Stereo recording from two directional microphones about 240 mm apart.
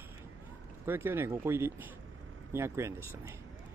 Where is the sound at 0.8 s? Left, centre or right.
Centre.